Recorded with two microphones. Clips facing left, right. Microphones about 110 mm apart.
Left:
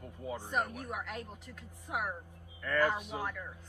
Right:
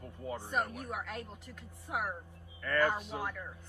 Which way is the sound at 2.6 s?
5° left (ahead or behind).